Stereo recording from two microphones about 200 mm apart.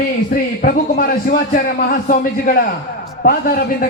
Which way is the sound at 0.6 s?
45° left (ahead or behind).